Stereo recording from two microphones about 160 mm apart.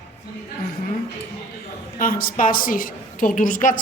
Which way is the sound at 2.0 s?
65° left (ahead or behind).